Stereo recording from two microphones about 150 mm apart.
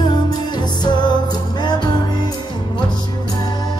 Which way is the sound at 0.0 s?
30° left (ahead or behind).